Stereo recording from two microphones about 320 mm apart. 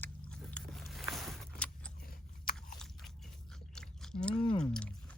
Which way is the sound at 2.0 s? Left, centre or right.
Left.